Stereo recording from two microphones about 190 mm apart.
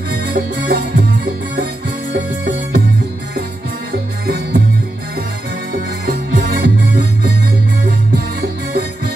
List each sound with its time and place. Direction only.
0.1 s music: 60° right (ahead or behind)
2.1 s music: 60° right (ahead or behind)
4.3 s music: 60° right (ahead or behind)
5.7 s music: 55° right (ahead or behind)
8.4 s music: 60° right (ahead or behind)